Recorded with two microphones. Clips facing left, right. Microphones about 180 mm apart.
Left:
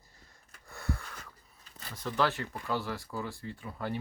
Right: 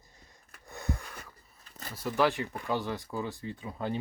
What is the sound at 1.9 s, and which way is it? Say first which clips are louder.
Speech: right 3 dB; 10° right (ahead or behind).